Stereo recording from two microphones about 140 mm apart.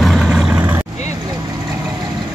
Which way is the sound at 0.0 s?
Centre (ahead or behind).